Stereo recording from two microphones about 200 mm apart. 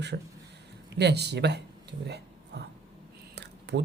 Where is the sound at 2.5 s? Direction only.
55° right (ahead or behind).